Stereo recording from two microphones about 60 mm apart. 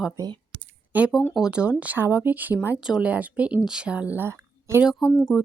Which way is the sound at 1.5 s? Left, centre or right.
Centre.